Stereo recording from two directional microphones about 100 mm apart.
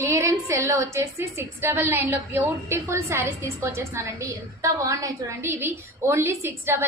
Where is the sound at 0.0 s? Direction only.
30° right (ahead or behind).